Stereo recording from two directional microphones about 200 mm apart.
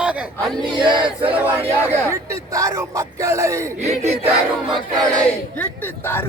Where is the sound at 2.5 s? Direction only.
15° right (ahead or behind).